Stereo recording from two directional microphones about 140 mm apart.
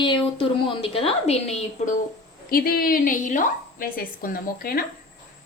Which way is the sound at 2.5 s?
90° left.